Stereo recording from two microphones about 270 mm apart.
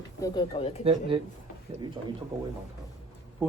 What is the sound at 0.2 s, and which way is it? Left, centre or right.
Speech, centre.